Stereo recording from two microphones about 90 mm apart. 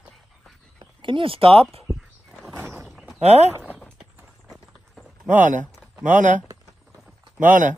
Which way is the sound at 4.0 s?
Centre (ahead or behind).